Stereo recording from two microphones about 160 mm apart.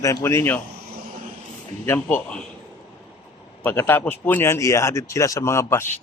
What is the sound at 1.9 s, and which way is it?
Speech, 10° left (ahead or behind).